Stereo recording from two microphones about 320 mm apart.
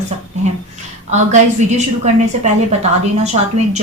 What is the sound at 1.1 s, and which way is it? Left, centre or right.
Speech, right.